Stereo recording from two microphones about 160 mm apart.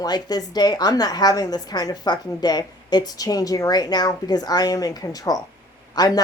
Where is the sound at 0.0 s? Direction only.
25° left (ahead or behind).